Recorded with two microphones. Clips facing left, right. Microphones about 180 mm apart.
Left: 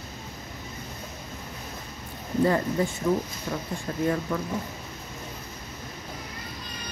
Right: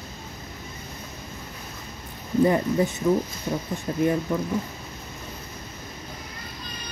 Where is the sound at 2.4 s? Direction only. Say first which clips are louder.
Right 2 dB; 20° right (ahead or behind).